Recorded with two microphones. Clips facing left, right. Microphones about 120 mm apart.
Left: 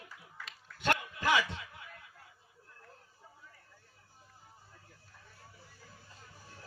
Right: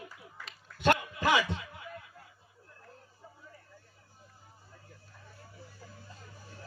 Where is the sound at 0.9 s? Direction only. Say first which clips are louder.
Right 4 dB; 15° right (ahead or behind).